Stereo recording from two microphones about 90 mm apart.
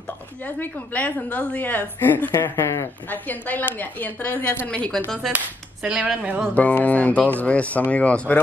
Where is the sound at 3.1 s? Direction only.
20° left (ahead or behind).